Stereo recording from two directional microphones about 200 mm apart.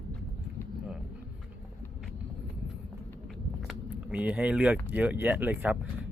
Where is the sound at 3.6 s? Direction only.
5° right (ahead or behind).